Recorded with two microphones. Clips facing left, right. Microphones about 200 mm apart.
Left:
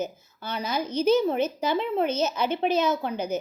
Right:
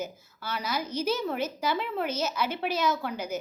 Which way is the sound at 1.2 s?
20° left (ahead or behind).